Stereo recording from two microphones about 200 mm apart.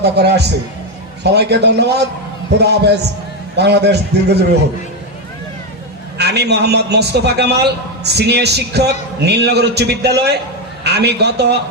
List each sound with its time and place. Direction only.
0.0 s a man's voice: 55° right (ahead or behind)
6.1 s a man's voice: 55° right (ahead or behind)